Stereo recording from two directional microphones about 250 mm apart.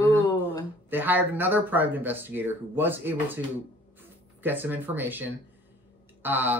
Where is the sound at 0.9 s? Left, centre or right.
Centre.